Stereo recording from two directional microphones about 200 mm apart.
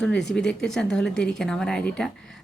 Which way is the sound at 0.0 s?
5° left (ahead or behind).